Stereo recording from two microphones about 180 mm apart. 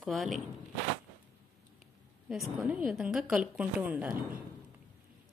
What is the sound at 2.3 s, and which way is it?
A woman's voice, 5° right (ahead or behind).